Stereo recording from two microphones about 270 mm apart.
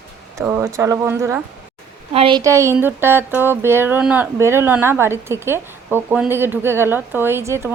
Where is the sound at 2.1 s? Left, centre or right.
Centre.